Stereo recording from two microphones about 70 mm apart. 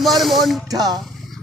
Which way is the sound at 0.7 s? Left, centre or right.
Right.